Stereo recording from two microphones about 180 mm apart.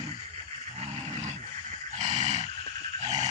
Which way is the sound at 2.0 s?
40° right (ahead or behind).